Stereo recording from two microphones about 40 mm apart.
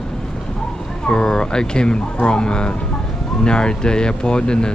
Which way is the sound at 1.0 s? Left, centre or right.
Centre.